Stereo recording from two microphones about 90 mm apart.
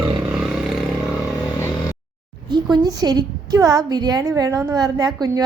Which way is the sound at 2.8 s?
45° right (ahead or behind).